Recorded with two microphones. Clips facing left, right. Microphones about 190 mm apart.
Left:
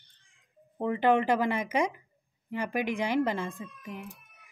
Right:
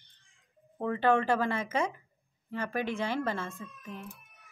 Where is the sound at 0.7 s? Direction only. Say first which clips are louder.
Left 2 dB; 15° left (ahead or behind).